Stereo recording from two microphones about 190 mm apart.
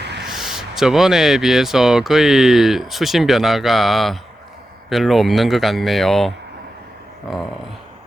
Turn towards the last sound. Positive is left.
turn(degrees=0)  # may be behind; listen again after turning